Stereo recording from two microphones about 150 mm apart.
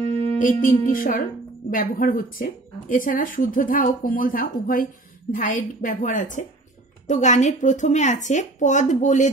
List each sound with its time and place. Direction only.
0.4 s a woman's voice: 65° left (ahead or behind)